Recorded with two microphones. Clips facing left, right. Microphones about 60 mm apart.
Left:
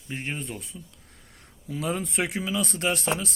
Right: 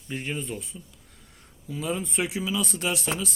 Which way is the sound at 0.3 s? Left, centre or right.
Left.